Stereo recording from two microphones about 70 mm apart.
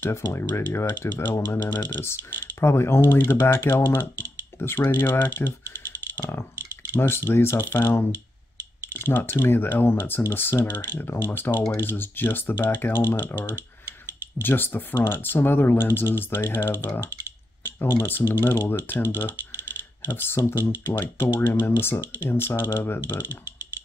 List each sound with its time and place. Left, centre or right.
0.3 s speech: left
6.1 s a sound: left
6.9 s speech: left